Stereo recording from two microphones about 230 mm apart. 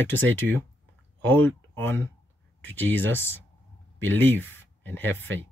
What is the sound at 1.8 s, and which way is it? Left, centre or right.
Speech, centre.